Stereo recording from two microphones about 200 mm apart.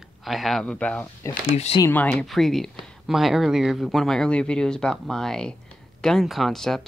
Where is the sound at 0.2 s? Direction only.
Centre (ahead or behind).